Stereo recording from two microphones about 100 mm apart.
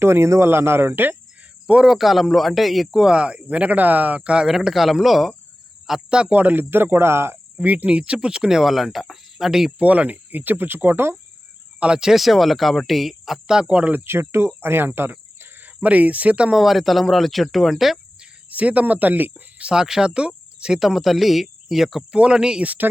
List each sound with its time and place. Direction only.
0.0 s speech: 25° right (ahead or behind)
1.6 s speech: 10° right (ahead or behind)
11.8 s speech: 10° right (ahead or behind)
18.4 s speech: 15° right (ahead or behind)